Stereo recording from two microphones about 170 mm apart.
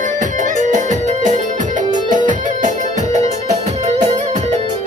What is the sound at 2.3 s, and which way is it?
Music, 45° right (ahead or behind).